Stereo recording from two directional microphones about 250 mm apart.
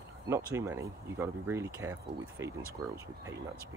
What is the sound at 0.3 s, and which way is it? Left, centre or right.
Speech, centre.